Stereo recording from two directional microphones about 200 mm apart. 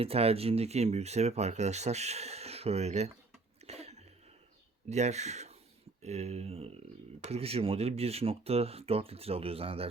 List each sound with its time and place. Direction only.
0.0 s speech: 30° right (ahead or behind)
3.7 s cough: 30° right (ahead or behind)
4.9 s speech: 35° right (ahead or behind)